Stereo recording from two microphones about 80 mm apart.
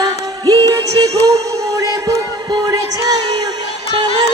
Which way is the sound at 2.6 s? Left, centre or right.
Right.